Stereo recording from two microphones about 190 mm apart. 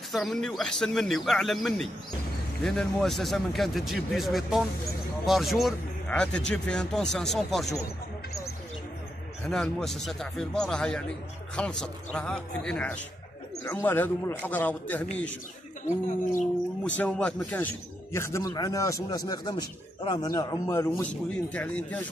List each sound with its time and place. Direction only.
0.1 s a man's voice: centre (ahead or behind)
9.5 s a man's voice: 5° left (ahead or behind)
16.8 s a man's voice: 5° left (ahead or behind)
18.1 s a man's voice: 15° left (ahead or behind)